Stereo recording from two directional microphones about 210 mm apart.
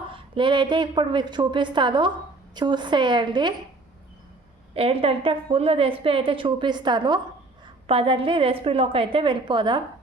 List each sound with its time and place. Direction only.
0.1 s a woman's voice: 20° right (ahead or behind)
4.7 s a woman's voice: 25° right (ahead or behind)